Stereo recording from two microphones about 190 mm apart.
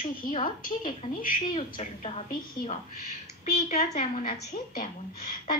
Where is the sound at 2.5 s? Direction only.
40° left (ahead or behind).